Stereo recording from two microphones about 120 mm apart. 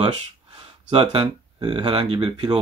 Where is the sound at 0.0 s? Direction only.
60° right (ahead or behind).